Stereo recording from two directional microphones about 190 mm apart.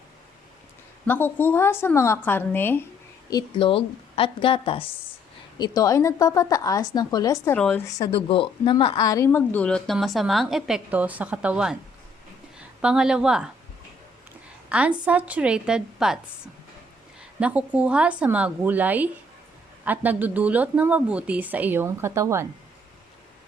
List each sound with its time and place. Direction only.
1.0 s a woman's voice: 10° left (ahead or behind)
3.2 s a woman's voice: 25° left (ahead or behind)
7.5 s a woman's voice: 5° left (ahead or behind)
7.9 s speech: 25° left (ahead or behind); by 11.8 s 5° right (ahead or behind)
12.8 s speech: 5° right (ahead or behind)
14.7 s speech: 5° right (ahead or behind)
17.4 s speech: 5° right (ahead or behind)